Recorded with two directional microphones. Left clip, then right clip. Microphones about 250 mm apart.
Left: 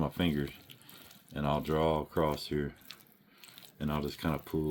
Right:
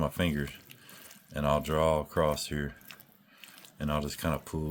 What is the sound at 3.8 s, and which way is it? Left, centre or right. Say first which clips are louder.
Speech: right 3 dB; right.